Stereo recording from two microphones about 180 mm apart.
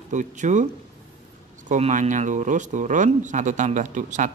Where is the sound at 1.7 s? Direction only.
45° right (ahead or behind).